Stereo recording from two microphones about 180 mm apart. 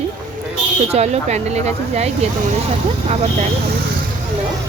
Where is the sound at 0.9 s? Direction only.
40° right (ahead or behind).